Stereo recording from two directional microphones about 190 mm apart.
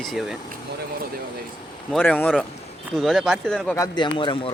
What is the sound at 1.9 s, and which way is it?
Speech, 10° left (ahead or behind).